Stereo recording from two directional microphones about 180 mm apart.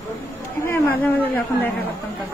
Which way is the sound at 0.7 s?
10° left (ahead or behind).